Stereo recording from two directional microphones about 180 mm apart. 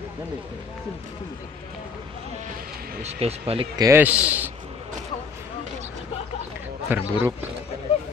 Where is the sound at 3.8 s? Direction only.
15° right (ahead or behind).